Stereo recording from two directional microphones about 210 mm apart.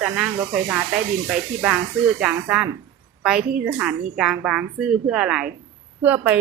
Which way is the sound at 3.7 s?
10° right (ahead or behind).